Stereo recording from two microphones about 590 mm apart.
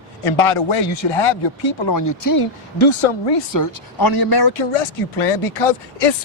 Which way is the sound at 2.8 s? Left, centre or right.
Left.